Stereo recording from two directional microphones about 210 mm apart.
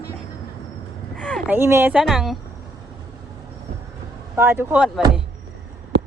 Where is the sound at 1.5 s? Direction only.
10° right (ahead or behind).